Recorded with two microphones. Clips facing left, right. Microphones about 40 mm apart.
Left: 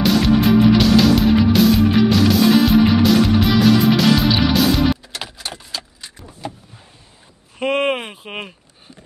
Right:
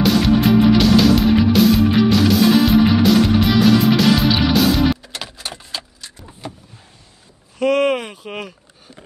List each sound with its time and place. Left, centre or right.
0.0 s music: centre
5.4 s a sound: centre
7.5 s speech: left